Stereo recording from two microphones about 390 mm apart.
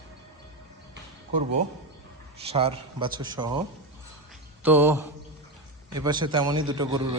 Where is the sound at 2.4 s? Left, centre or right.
Centre.